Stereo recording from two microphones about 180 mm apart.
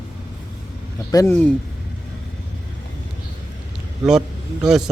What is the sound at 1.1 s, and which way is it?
Speech, 15° left (ahead or behind).